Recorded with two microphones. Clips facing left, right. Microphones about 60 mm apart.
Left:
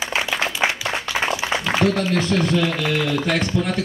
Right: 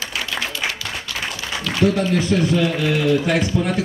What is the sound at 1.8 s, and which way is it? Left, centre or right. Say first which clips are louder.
A man's voice: right 5 dB; centre.